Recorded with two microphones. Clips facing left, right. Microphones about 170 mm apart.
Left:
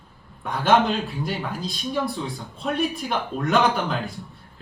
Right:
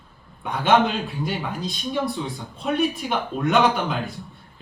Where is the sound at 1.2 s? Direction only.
Centre (ahead or behind).